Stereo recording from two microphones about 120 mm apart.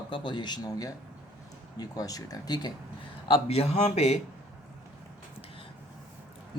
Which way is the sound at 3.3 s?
55° left (ahead or behind).